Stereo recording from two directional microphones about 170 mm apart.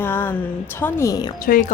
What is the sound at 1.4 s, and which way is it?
Speech, 55° left (ahead or behind).